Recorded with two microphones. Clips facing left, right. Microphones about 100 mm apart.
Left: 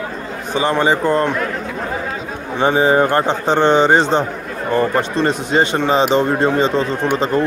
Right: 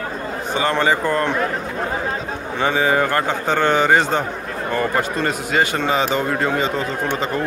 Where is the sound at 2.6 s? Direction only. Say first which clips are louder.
Left 5 dB; 30° left (ahead or behind).